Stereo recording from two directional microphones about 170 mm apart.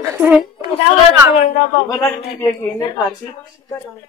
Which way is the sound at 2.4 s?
15° left (ahead or behind).